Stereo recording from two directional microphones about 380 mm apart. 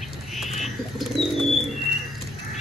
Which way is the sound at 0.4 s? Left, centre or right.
Centre.